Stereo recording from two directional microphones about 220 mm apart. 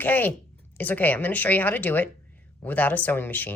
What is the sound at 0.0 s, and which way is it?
Speech, 10° left (ahead or behind).